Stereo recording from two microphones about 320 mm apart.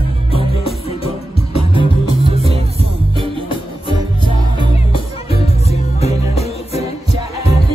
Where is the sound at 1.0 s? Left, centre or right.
Centre.